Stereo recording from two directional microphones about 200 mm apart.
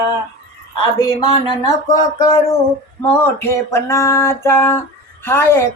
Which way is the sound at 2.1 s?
15° left (ahead or behind).